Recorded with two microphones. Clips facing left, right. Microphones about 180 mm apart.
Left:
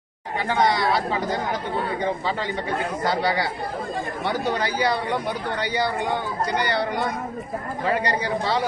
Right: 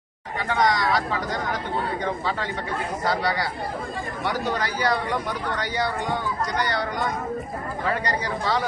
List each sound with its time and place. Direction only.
0.5 s a man's voice: 30° left (ahead or behind)
3.1 s a man's voice: 25° left (ahead or behind)